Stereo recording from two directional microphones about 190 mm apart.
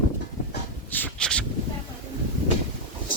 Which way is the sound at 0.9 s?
5° left (ahead or behind).